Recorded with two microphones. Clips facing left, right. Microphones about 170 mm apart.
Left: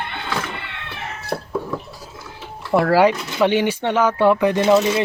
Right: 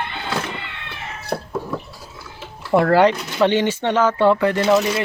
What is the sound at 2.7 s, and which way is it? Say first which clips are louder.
Speech: right 1 dB; 5° left (ahead or behind).